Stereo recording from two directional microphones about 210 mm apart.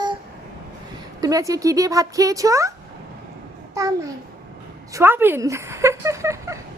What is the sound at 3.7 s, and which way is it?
Speech, 15° right (ahead or behind).